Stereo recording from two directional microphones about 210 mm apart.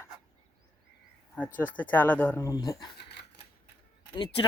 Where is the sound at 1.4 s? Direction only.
10° left (ahead or behind).